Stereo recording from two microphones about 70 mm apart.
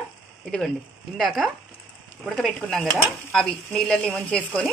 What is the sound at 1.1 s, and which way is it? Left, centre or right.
Speech, centre.